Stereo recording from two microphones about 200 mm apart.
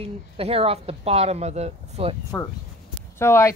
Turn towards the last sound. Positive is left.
turn(degrees=15)  # may be behind; listen again after turning